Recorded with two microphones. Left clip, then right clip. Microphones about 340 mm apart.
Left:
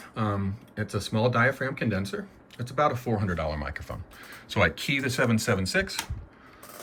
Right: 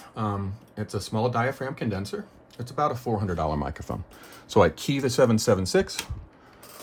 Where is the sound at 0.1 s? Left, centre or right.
Centre.